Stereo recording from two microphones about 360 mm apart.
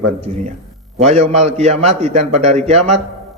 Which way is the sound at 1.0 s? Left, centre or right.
Centre.